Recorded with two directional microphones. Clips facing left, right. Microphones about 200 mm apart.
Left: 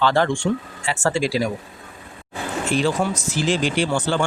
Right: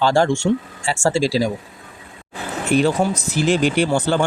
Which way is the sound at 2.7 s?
50° right (ahead or behind).